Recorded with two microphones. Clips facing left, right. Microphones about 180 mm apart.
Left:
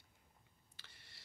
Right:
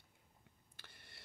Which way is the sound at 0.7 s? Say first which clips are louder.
Right 3 dB; 50° right (ahead or behind).